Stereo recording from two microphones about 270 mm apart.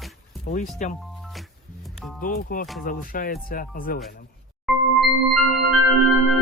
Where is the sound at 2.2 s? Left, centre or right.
Left.